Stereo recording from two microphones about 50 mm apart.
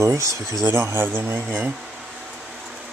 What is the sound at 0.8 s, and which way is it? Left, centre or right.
Speech, right.